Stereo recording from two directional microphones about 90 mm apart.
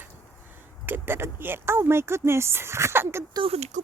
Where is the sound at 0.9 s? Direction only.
25° right (ahead or behind).